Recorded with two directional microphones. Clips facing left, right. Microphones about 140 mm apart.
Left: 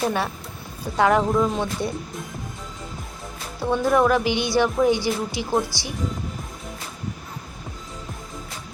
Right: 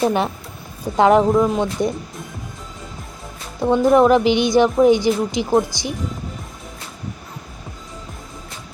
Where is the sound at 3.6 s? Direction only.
20° right (ahead or behind).